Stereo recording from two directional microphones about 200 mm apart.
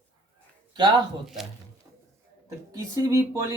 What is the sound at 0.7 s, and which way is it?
Speech, 20° right (ahead or behind).